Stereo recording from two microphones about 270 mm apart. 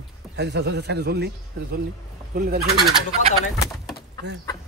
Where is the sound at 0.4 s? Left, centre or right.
Right.